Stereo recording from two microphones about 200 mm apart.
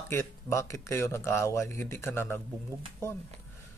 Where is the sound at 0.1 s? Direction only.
15° left (ahead or behind).